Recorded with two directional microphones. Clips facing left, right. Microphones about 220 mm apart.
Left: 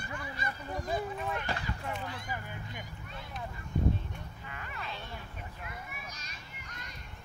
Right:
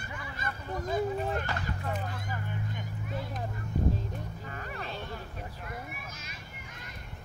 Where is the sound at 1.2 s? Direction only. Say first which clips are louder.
Right 3 dB; 40° right (ahead or behind).